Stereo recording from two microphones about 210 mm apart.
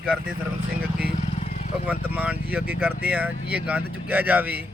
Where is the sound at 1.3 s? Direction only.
35° left (ahead or behind).